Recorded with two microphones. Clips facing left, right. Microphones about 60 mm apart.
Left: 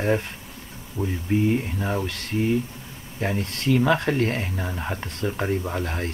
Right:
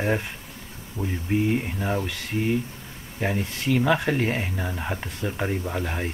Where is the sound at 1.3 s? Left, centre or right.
Centre.